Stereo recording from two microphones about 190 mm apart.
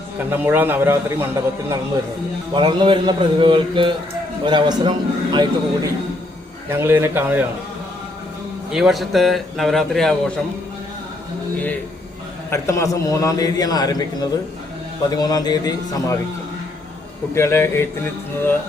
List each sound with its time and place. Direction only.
0.3 s a man's voice: 10° right (ahead or behind)
2.5 s a man's voice: 25° right (ahead or behind)
6.7 s a man's voice: 10° right (ahead or behind)
8.7 s a man's voice: centre (ahead or behind)
12.5 s a man's voice: 15° left (ahead or behind)
17.3 s speech: 15° left (ahead or behind)